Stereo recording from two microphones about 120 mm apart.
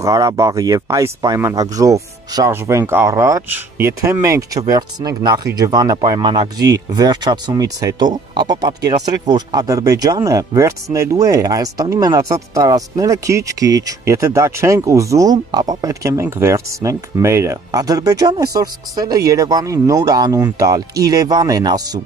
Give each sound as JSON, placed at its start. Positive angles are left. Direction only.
{"t": 0.0, "sound": "speech", "side_deg": -30}
{"t": 3.4, "sound": "speech", "side_deg": -15}